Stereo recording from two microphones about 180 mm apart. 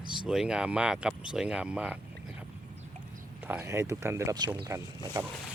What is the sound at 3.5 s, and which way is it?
Speech, 15° right (ahead or behind).